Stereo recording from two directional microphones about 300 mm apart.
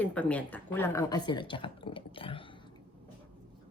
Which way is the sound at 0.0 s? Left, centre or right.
Centre.